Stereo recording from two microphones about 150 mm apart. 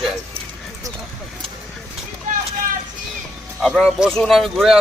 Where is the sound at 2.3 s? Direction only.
60° right (ahead or behind).